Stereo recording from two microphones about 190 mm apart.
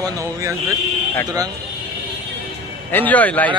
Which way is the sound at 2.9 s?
10° left (ahead or behind).